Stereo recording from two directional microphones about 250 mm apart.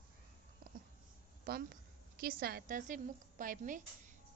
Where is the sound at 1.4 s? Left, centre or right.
Right.